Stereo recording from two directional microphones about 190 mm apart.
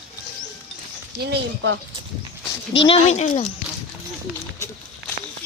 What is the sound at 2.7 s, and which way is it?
Speech, 30° left (ahead or behind).